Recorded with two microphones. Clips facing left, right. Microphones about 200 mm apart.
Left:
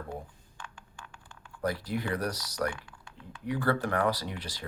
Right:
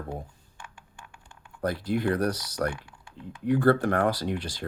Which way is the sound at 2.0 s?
55° right (ahead or behind).